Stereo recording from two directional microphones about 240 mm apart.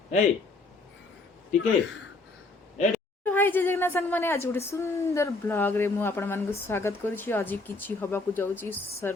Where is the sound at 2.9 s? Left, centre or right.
Centre.